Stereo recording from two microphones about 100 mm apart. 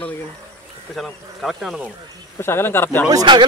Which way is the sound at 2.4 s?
25° left (ahead or behind).